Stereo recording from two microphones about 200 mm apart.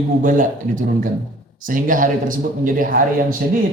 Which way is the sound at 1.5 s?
40° right (ahead or behind).